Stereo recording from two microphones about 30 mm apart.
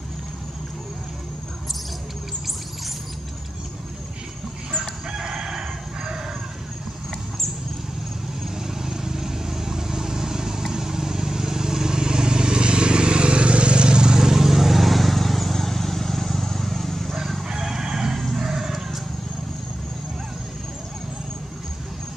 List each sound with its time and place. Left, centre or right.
5.1 s crowing: right
8.6 s vehicle: centre
14.1 s vehicle: centre
17.5 s neigh: centre
18.1 s a sound: centre